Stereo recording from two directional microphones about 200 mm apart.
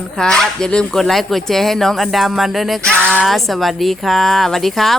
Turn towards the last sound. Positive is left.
turn(degrees=0)  # may be behind; listen again after turning